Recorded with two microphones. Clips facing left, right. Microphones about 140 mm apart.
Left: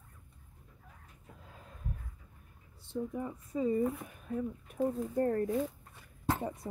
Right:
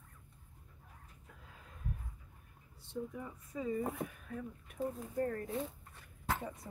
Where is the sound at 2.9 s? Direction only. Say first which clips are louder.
Left 6 dB; 30° left (ahead or behind).